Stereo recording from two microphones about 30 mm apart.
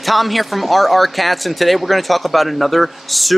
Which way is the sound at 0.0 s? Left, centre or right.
Centre.